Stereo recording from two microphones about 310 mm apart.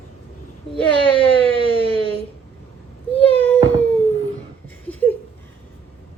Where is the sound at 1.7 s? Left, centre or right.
Centre.